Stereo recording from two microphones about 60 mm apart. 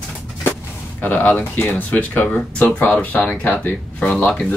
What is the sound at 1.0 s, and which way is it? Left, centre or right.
Speech, left.